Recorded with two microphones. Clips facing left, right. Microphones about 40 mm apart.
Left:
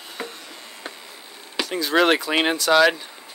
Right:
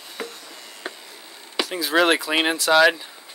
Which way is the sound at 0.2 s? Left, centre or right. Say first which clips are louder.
Even; centre.